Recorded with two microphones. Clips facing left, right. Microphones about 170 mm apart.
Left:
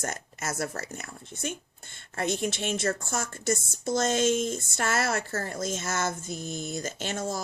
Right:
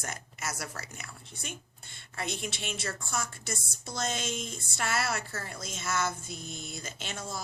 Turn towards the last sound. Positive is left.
turn(degrees=45)  # may be behind; listen again after turning